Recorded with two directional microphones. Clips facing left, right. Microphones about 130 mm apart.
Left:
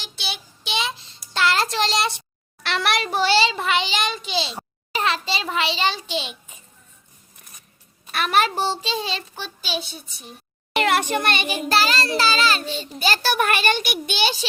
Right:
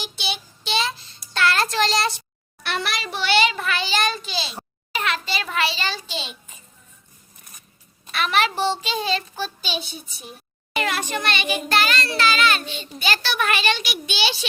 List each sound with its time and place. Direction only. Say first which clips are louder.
0.0 s child singing: right 3 dB; centre (ahead or behind)
0.6 s child singing: right 2 dB; 15° left (ahead or behind)
2.6 s a sound: left 4 dB; 75° left (ahead or behind)
3.1 s a child's voice: right 1 dB; 40° left (ahead or behind); by 6.3 s 15° left (ahead or behind)
8.1 s a child's voice: left 1 dB; 45° left (ahead or behind)
9.6 s a child's voice: left 1 dB; centre (ahead or behind)
10.8 s a child's voice: left 5 dB; 55° left (ahead or behind)
11.7 s a child's voice: left 2 dB; 35° left (ahead or behind); by 14.3 s 50° left (ahead or behind)